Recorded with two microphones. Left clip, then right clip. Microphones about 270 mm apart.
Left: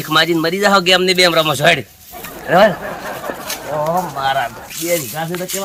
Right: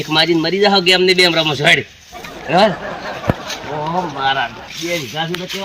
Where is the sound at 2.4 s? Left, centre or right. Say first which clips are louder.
Left 2 dB; centre.